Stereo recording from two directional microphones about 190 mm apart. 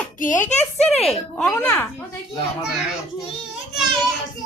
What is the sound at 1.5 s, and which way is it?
Speech, 10° left (ahead or behind).